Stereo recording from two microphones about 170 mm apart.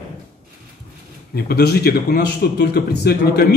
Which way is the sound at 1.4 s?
70° left (ahead or behind).